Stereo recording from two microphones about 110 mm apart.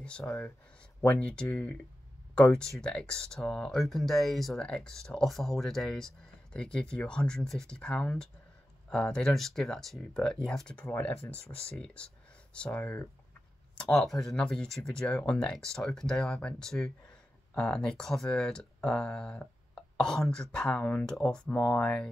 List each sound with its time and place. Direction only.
0.0 s speech: 10° left (ahead or behind)
13.7 s speech: 5° left (ahead or behind)